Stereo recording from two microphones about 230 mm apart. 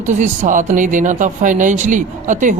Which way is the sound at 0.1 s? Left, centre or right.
Right.